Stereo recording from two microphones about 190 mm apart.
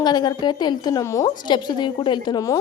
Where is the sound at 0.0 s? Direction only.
20° left (ahead or behind).